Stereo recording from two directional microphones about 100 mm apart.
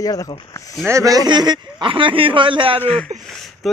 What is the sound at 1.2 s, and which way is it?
A man's voice, 50° right (ahead or behind).